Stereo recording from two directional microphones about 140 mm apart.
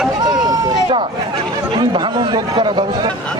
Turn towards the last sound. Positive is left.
turn(degrees=-35)  # may be behind; listen again after turning